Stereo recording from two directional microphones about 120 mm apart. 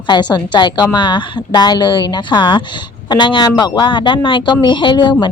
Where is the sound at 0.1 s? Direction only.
35° left (ahead or behind).